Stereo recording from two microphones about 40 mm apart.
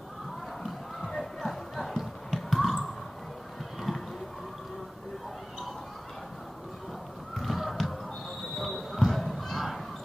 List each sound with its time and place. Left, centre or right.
0.7 s music: centre
3.9 s a sound: centre
7.3 s crow: centre
8.5 s basketball bounce: centre